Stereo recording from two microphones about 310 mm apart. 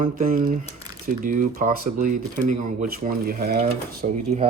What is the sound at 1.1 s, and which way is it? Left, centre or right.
Speech, right.